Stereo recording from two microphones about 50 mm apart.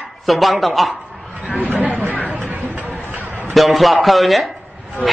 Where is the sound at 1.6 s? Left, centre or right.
Right.